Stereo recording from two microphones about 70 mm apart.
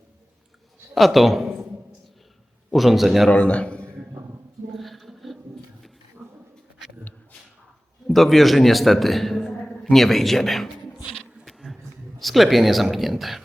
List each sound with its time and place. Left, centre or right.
0.9 s a man's voice: centre
2.7 s speech: centre
3.2 s speech: centre
4.7 s a sound: centre
8.0 s a man's voice: centre
11.4 s a sound: centre
12.2 s speech: centre